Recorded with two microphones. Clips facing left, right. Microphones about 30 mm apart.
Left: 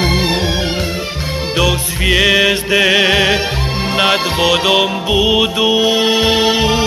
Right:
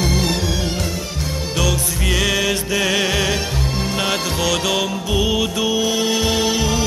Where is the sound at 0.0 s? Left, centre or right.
Left.